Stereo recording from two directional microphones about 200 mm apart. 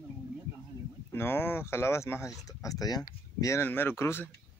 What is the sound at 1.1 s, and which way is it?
Speech, 10° left (ahead or behind).